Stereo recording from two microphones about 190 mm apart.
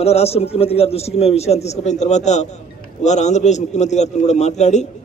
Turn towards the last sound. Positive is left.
turn(degrees=40)  # may be behind; listen again after turning